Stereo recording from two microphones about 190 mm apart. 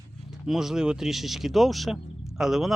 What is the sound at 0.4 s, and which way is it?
Speech, centre (ahead or behind).